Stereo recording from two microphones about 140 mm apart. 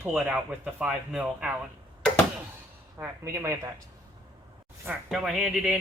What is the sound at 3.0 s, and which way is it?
Speech, 20° right (ahead or behind).